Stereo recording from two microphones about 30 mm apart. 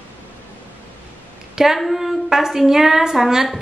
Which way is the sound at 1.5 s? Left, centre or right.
Centre.